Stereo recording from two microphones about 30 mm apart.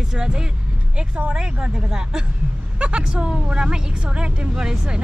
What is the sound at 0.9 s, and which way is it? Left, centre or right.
Speech, right.